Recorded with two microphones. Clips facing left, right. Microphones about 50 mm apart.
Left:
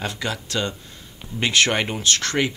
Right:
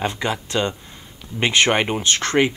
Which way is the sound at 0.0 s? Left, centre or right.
Right.